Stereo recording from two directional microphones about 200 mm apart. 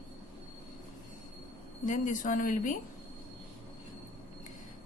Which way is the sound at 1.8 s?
40° left (ahead or behind).